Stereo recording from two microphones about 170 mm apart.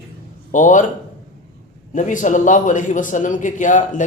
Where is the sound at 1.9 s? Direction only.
50° left (ahead or behind).